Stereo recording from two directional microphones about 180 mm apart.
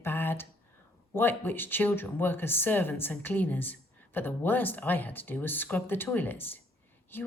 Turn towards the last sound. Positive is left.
turn(degrees=10)  # may be behind; listen again after turning